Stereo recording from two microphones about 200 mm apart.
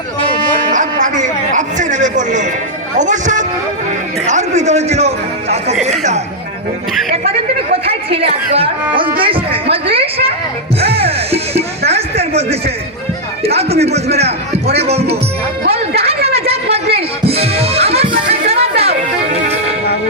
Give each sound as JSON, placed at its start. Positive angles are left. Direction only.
{"t": 0.7, "sound": "a sound", "side_deg": -40}
{"t": 3.0, "sound": "a man's voice", "side_deg": -40}
{"t": 7.9, "sound": "speech", "side_deg": -30}
{"t": 10.8, "sound": "music", "side_deg": -30}
{"t": 11.9, "sound": "a sound", "side_deg": -30}
{"t": 13.4, "sound": "a man's voice", "side_deg": -30}
{"t": 16.0, "sound": "music", "side_deg": -30}